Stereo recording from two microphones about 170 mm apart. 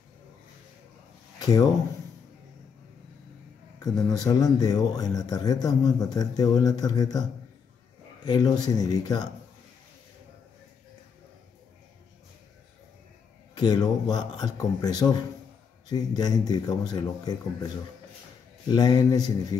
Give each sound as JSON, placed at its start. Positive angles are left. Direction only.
{"t": 1.4, "sound": "speech", "side_deg": 20}
{"t": 3.8, "sound": "speech", "side_deg": 20}
{"t": 8.3, "sound": "speech", "side_deg": 25}
{"t": 13.6, "sound": "speech", "side_deg": 25}
{"t": 18.7, "sound": "speech", "side_deg": 25}